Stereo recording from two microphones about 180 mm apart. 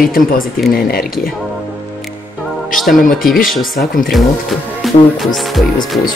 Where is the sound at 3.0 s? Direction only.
50° left (ahead or behind).